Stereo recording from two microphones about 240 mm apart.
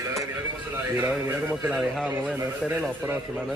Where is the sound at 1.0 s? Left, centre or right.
Centre.